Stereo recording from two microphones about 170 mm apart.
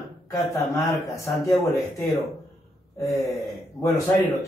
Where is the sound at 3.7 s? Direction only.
15° left (ahead or behind).